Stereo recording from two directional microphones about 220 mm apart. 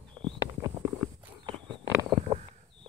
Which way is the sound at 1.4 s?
20° right (ahead or behind).